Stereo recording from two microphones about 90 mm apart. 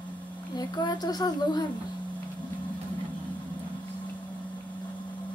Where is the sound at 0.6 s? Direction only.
50° left (ahead or behind).